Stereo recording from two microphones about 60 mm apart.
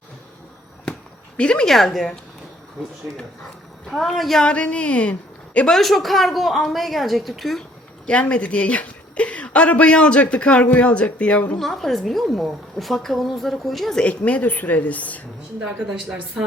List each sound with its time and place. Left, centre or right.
1.4 s a woman's voice: centre
1.6 s a woman's voice: centre
3.8 s a woman's voice: centre
4.4 s a woman's voice: centre
5.7 s a woman's voice: centre
8.0 s a woman's voice: centre
11.6 s a woman's voice: centre
14.0 s a woman's voice: left